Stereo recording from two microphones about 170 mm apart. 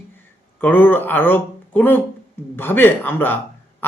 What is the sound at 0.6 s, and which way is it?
Speech, 10° left (ahead or behind).